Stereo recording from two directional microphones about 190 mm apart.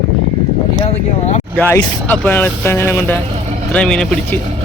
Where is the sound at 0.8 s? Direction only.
35° left (ahead or behind).